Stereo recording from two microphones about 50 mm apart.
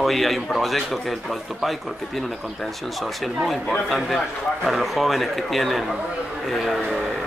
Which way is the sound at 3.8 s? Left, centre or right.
Centre.